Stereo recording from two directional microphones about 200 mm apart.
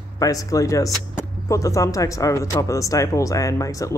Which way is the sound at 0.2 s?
15° left (ahead or behind).